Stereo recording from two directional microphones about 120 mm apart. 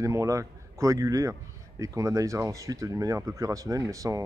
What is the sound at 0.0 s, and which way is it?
A man's voice, 25° right (ahead or behind).